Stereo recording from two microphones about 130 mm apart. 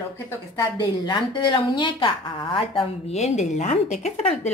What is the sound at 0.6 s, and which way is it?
A woman's voice, 35° left (ahead or behind).